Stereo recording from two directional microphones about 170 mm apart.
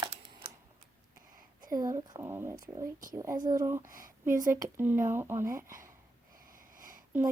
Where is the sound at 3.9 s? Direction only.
55° right (ahead or behind).